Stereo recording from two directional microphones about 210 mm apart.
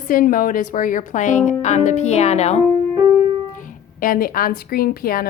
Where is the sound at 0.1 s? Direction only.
40° left (ahead or behind).